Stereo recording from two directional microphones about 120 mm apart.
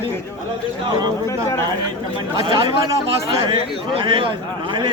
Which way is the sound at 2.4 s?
45° right (ahead or behind).